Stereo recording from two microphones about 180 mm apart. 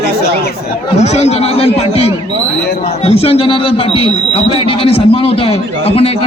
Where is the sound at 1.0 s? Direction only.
35° left (ahead or behind).